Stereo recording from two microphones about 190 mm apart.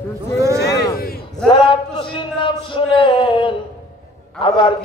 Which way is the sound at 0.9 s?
50° left (ahead or behind).